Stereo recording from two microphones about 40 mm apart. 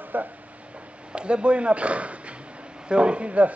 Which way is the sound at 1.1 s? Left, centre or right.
Right.